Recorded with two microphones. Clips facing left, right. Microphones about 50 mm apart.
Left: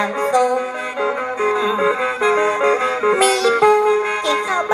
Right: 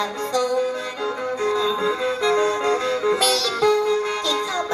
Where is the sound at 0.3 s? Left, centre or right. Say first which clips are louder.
Left 3 dB; left.